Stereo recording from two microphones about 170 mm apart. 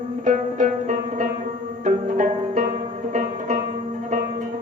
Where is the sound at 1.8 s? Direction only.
45° right (ahead or behind).